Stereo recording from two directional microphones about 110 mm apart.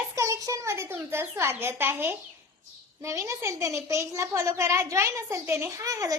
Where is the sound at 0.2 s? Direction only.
30° right (ahead or behind).